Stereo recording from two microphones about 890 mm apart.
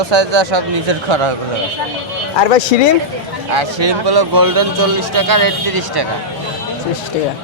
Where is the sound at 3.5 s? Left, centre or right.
Right.